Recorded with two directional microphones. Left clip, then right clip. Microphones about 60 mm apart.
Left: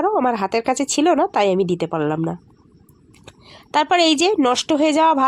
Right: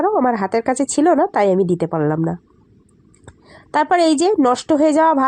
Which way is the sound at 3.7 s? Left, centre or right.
Centre.